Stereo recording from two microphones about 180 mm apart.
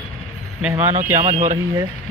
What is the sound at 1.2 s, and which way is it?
Speech, 40° right (ahead or behind).